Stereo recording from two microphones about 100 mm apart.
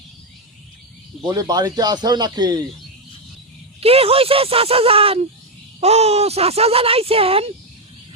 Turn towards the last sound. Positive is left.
turn(degrees=-75)  # may be behind; listen again after turning